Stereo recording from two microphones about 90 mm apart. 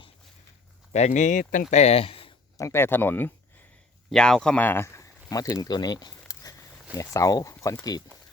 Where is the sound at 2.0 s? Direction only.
90° left.